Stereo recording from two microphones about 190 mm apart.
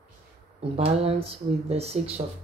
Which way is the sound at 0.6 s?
30° right (ahead or behind).